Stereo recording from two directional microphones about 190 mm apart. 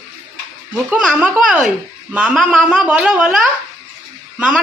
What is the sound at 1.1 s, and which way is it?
Speech, 5° right (ahead or behind).